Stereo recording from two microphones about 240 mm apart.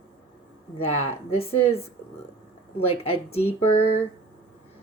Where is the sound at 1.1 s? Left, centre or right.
Left.